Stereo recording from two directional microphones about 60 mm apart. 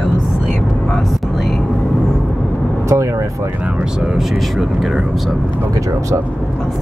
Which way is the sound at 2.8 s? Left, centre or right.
Right.